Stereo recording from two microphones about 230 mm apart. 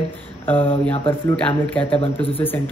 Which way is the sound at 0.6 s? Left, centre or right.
Left.